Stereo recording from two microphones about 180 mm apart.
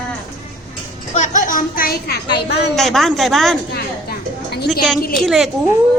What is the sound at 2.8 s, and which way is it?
Speech, centre (ahead or behind).